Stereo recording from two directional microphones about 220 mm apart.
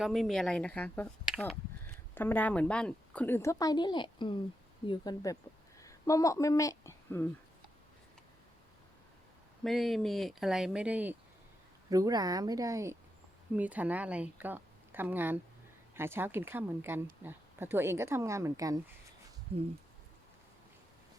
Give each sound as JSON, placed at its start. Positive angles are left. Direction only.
{"t": 0.0, "sound": "a woman's voice", "side_deg": 0}
{"t": 9.6, "sound": "a woman's voice", "side_deg": 0}